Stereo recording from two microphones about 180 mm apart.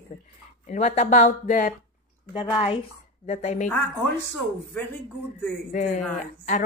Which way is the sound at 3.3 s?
40° left (ahead or behind).